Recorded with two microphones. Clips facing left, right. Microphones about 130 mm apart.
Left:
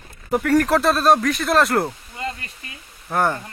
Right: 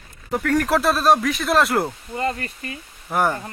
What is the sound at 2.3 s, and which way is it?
Speech, 50° right (ahead or behind).